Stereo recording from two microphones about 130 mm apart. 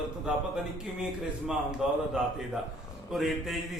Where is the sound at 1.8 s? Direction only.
5° right (ahead or behind).